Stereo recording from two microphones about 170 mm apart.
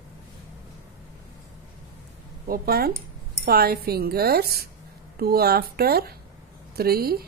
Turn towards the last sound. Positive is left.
turn(degrees=-65)  # may be behind; listen again after turning